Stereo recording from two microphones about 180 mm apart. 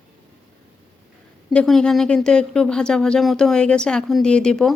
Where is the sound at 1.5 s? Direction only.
5° left (ahead or behind).